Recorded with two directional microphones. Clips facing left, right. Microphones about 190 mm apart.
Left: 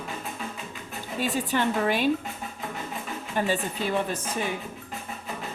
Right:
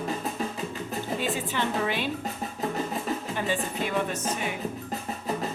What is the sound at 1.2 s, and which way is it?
Speech, 45° left (ahead or behind).